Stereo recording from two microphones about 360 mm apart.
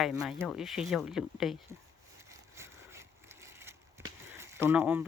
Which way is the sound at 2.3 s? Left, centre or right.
Centre.